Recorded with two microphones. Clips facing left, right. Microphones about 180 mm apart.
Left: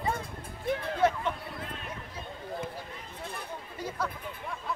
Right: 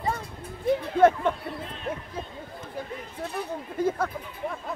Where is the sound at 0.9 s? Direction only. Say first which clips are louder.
Right 8 dB; 50° right (ahead or behind).